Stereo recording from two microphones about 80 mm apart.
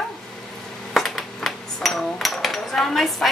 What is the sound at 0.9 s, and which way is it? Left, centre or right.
Speech, centre.